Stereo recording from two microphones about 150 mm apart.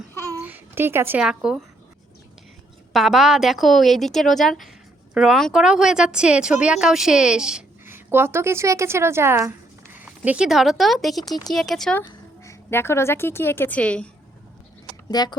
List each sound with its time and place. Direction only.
0.4 s speech: 15° right (ahead or behind)
2.9 s a woman's voice: centre (ahead or behind)
12.0 s a woman's voice: 20° left (ahead or behind)
15.1 s speech: 25° left (ahead or behind)